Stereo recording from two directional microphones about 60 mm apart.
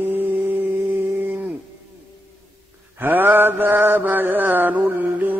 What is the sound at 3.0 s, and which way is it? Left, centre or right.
Mantra, right.